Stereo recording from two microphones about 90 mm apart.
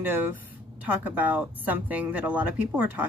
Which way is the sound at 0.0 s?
20° right (ahead or behind).